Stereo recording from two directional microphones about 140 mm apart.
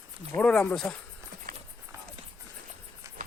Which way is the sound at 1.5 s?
80° right.